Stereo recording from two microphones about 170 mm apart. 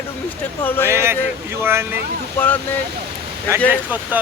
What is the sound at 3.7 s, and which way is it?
Speech, 10° right (ahead or behind).